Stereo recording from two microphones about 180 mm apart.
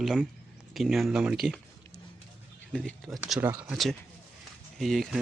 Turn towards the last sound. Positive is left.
turn(degrees=0)  # may be behind; listen again after turning